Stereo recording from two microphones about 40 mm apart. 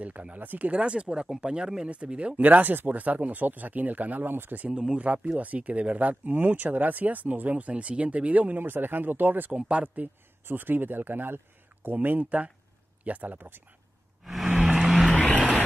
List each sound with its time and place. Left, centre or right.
0.3 s speech: right; by 1.9 s centre
1.9 s speech: right
4.3 s speech: right
4.6 s speech: right
5.0 s speech: right
7.7 s speech: right
8.5 s speech: right
9.5 s speech: right
10.4 s speech: right
14.2 s vehicle: centre